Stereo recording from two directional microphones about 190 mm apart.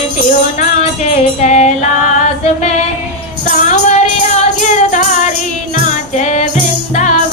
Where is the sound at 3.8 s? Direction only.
35° left (ahead or behind).